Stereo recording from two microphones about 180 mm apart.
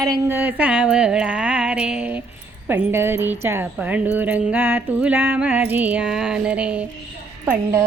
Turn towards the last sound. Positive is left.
turn(degrees=-20)  # may be behind; listen again after turning